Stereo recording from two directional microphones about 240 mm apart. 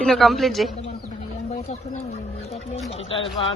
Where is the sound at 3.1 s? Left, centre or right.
Left.